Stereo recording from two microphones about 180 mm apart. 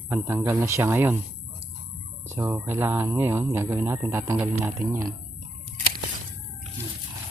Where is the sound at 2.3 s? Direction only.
15° right (ahead or behind).